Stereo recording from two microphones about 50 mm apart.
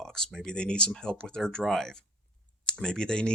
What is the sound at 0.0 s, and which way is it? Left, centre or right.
Speech, centre.